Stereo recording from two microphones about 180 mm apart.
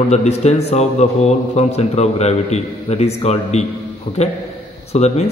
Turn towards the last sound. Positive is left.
turn(degrees=35)  # may be behind; listen again after turning